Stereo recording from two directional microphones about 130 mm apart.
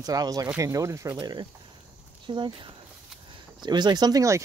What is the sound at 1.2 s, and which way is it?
Speech, 35° right (ahead or behind).